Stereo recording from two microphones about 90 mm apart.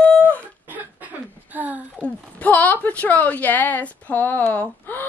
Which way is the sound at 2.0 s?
15° left (ahead or behind).